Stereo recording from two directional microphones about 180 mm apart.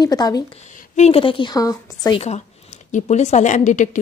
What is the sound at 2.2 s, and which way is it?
A woman's voice, 40° left (ahead or behind).